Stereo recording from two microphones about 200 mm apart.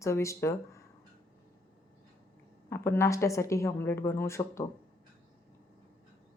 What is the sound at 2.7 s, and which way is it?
A woman's voice, 15° left (ahead or behind).